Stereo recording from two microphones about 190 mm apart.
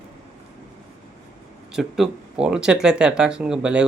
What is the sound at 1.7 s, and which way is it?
Speech, centre (ahead or behind).